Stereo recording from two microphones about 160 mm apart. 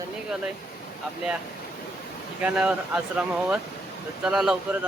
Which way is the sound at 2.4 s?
5° right (ahead or behind).